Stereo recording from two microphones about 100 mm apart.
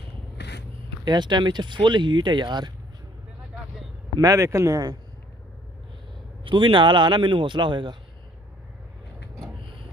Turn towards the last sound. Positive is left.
turn(degrees=-50)  # may be behind; listen again after turning